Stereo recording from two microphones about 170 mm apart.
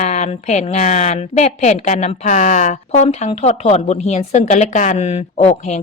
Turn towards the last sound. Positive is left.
turn(degrees=40)  # may be behind; listen again after turning